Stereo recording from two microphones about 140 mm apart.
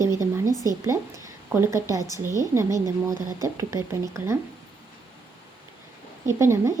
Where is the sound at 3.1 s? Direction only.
30° left (ahead or behind).